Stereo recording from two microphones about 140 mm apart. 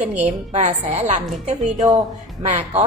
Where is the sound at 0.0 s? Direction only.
10° right (ahead or behind).